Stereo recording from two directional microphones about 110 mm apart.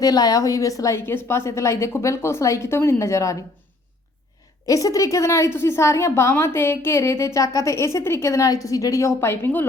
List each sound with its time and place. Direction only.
0.0 s a woman's voice: 35° left (ahead or behind)
4.6 s a woman's voice: 30° left (ahead or behind)